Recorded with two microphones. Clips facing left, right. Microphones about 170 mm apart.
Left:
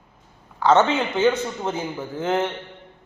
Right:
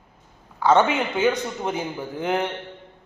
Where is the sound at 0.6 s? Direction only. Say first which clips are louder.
Left 1 dB; 10° right (ahead or behind).